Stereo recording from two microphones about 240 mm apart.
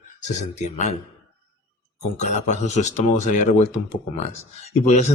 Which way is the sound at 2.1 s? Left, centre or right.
Left.